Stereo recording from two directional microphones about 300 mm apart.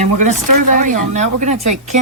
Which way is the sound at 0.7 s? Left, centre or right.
Right.